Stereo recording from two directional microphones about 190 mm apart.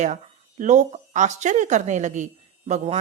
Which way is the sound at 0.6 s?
40° right (ahead or behind).